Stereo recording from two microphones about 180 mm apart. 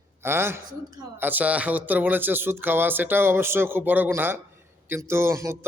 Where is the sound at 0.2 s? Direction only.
15° right (ahead or behind).